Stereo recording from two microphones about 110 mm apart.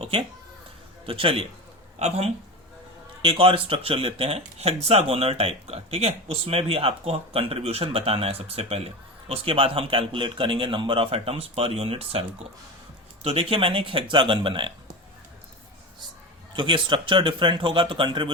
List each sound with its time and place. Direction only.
0.0 s speech: 55° right (ahead or behind)
2.0 s speech: 70° right (ahead or behind)
3.2 s speech: 55° right (ahead or behind)
13.2 s speech: 60° right (ahead or behind)
16.6 s speech: 50° right (ahead or behind)